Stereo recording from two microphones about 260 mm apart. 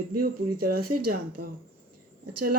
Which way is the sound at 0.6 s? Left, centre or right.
Right.